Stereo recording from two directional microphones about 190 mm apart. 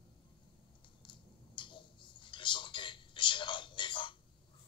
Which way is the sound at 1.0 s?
25° left (ahead or behind).